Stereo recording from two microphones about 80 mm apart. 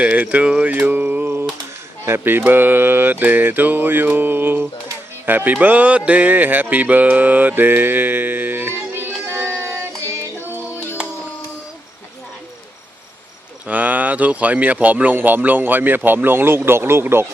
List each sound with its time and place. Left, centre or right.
0.0 s mantra: centre
5.2 s speech: right
13.7 s mantra: centre